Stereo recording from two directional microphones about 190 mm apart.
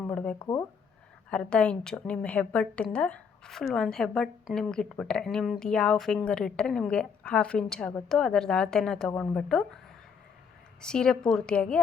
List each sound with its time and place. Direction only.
0.0 s a sound: 5° left (ahead or behind)
0.3 s speech: 25° left (ahead or behind)
1.3 s a woman's voice: 5° left (ahead or behind)
10.8 s a woman's voice: 5° left (ahead or behind)